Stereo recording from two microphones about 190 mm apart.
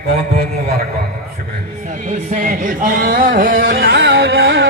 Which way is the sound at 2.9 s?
50° right (ahead or behind).